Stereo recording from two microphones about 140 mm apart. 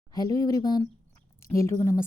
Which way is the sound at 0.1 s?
25° left (ahead or behind).